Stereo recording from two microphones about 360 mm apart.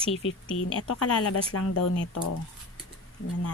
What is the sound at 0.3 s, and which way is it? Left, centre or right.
Speech, left.